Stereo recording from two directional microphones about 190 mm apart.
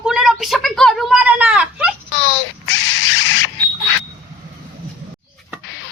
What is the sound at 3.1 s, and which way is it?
Smoke detector, 90° left.